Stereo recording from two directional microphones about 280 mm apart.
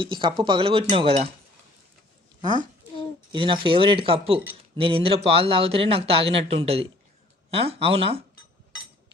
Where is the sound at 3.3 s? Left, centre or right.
Centre.